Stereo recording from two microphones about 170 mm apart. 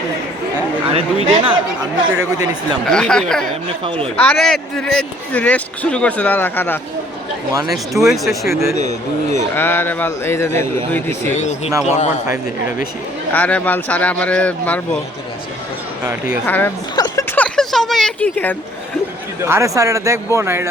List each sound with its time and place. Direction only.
0.9 s speech: 30° right (ahead or behind)
2.1 s speech: 20° right (ahead or behind)
2.8 s speech: 5° left (ahead or behind)
3.8 s speech: 30° right (ahead or behind)
4.2 s speech: 5° left (ahead or behind)
7.7 s speech: centre (ahead or behind)
8.8 s speech: 40° right (ahead or behind)
9.6 s speech: 10° left (ahead or behind)
11.3 s speech: 40° left (ahead or behind)
12.3 s a man's voice: 10° right (ahead or behind)
13.3 s speech: 10° left (ahead or behind)
16.5 s speech: 10° left (ahead or behind)
16.9 s a sound: 20° left (ahead or behind)
19.4 s a man's voice: 15° right (ahead or behind)